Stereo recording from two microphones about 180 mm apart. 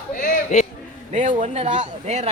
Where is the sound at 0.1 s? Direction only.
50° left (ahead or behind).